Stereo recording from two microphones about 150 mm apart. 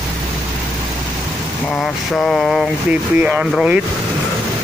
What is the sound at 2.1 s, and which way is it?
Speech, centre (ahead or behind).